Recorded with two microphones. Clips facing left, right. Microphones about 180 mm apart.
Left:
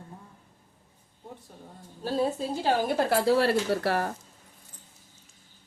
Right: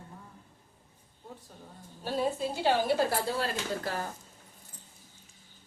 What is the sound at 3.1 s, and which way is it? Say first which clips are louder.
Speech: left 9 dB; 90° left.